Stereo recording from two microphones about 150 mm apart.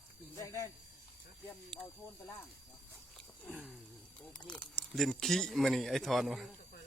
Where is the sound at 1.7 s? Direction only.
5° left (ahead or behind).